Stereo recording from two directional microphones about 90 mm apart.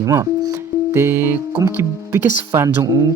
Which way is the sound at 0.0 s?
35° right (ahead or behind).